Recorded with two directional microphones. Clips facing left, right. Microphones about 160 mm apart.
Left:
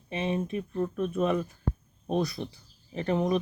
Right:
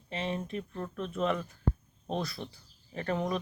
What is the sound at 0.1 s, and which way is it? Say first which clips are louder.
Speech: left 5 dB; 15° left (ahead or behind).